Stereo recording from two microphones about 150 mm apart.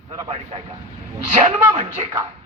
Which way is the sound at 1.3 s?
50° right (ahead or behind).